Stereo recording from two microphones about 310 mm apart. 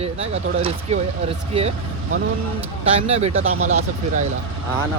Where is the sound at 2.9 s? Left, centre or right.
Centre.